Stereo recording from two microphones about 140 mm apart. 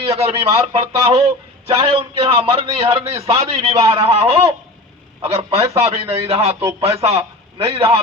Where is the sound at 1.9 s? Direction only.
40° right (ahead or behind).